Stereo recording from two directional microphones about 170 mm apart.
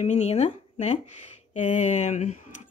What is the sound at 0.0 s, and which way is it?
Speech, 40° left (ahead or behind).